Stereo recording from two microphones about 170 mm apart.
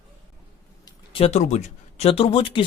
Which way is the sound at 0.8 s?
30° left (ahead or behind).